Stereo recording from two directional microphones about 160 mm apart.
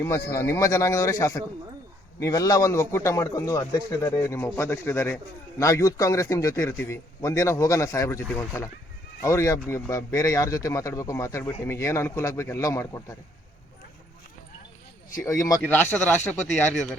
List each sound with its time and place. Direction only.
0.3 s a man's voice: 15° left (ahead or behind)
15.2 s a man's voice: 20° left (ahead or behind)
16.2 s speech: 45° left (ahead or behind)